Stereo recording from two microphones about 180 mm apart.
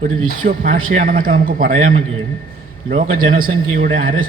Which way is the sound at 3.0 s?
50° right (ahead or behind).